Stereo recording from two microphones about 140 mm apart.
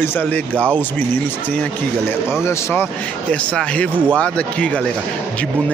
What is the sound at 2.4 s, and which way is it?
Speech, 20° left (ahead or behind).